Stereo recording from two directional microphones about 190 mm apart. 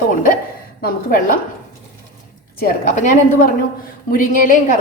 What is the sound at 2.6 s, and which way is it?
A woman's voice, 45° left (ahead or behind).